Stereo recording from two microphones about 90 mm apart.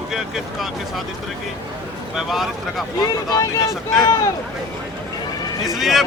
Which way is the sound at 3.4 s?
35° left (ahead or behind).